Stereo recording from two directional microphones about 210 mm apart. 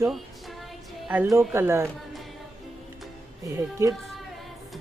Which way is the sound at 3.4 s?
15° right (ahead or behind).